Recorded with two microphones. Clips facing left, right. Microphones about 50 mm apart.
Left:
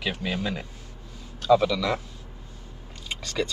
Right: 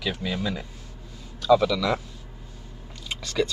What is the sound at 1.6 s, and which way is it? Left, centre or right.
Speech, centre.